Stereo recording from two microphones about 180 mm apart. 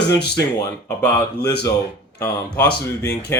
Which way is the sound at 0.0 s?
65° left (ahead or behind).